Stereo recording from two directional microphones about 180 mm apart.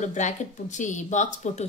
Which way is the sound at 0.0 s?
40° left (ahead or behind).